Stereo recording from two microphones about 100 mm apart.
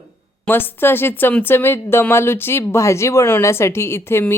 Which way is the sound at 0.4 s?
20° left (ahead or behind).